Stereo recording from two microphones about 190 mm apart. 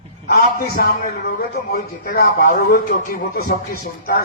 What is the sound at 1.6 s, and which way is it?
A man's voice, 50° left (ahead or behind).